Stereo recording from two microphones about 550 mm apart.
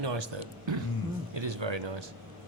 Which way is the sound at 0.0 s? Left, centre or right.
Right.